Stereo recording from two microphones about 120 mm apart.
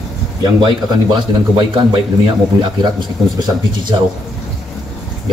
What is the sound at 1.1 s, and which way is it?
Speech, 40° right (ahead or behind).